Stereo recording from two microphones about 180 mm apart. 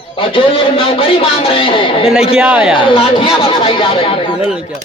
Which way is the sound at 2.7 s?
30° left (ahead or behind).